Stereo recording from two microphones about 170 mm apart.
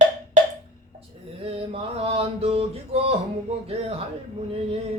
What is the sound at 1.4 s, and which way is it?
Mantra, 35° right (ahead or behind).